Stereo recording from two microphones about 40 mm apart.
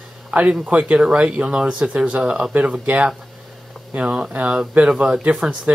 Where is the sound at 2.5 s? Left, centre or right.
Right.